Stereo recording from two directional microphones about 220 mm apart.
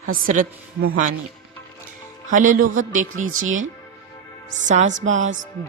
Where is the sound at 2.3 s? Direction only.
35° right (ahead or behind).